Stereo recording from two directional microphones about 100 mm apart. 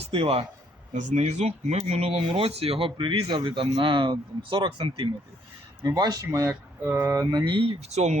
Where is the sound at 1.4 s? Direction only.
90° right; by 5.0 s 60° right (ahead or behind).